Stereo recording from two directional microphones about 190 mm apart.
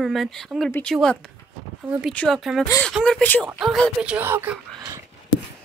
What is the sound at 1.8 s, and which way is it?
Speech, 10° right (ahead or behind).